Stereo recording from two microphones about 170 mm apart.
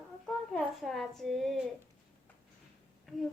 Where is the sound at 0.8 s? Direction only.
Centre (ahead or behind).